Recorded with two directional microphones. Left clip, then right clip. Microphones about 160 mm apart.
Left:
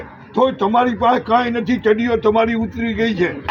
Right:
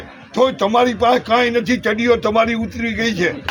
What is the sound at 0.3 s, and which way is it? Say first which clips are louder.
A man's voice: right 1 dB; 25° right (ahead or behind).